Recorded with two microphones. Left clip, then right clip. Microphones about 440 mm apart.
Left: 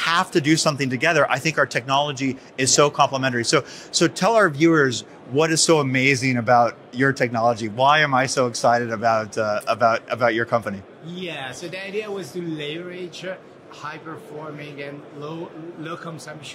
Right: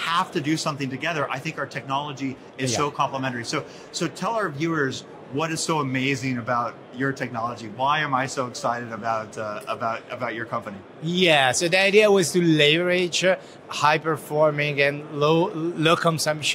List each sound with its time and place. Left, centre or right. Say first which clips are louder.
0.0 s speech: left 4 dB; left
11.1 s speech: right 13 dB; right